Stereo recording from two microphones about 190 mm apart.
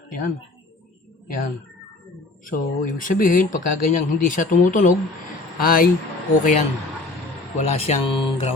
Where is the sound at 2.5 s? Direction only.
45° left (ahead or behind).